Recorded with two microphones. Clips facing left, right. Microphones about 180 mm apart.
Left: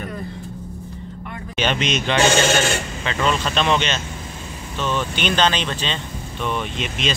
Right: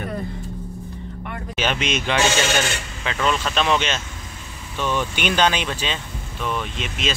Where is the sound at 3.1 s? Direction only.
5° right (ahead or behind).